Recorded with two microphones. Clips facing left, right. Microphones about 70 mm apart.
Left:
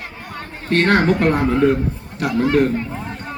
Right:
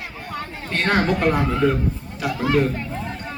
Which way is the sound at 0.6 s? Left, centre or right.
Left.